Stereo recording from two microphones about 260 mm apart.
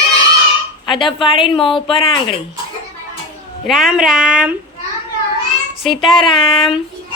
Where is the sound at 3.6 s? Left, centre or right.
Centre.